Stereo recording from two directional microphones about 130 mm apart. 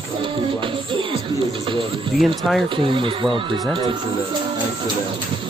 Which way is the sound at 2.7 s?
40° right (ahead or behind).